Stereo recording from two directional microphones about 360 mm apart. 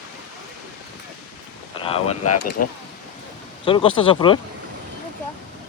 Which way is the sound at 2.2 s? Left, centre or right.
Left.